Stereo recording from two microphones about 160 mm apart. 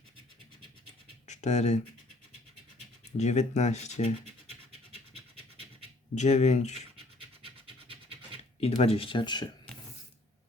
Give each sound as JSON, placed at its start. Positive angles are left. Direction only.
{"t": 1.3, "sound": "speech", "side_deg": 45}
{"t": 3.2, "sound": "speech", "side_deg": 45}
{"t": 4.9, "sound": "scratch", "side_deg": -35}
{"t": 6.1, "sound": "speech", "side_deg": 45}
{"t": 8.6, "sound": "speech", "side_deg": 40}